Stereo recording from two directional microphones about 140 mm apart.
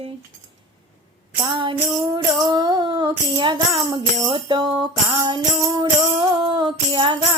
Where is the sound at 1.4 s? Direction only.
35° right (ahead or behind).